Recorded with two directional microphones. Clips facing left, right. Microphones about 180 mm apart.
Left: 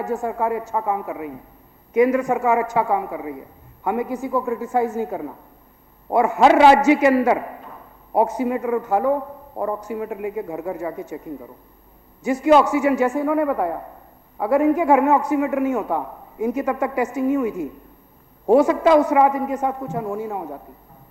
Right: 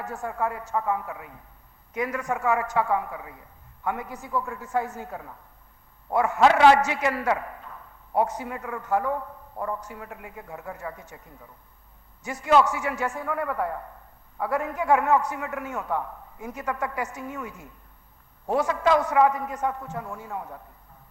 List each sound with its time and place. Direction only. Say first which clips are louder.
0.0 s a man's voice: left 7 dB; 15° left (ahead or behind)